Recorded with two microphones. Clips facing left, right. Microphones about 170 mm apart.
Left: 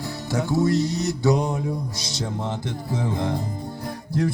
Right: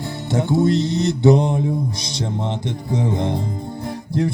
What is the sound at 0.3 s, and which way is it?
Music, 25° right (ahead or behind).